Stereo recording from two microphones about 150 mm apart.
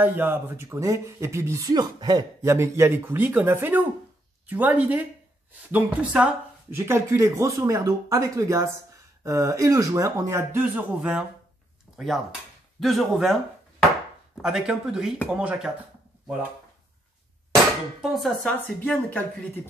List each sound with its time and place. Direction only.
0.0 s speech: 15° right (ahead or behind)
12.8 s speech: centre (ahead or behind)
18.0 s speech: centre (ahead or behind)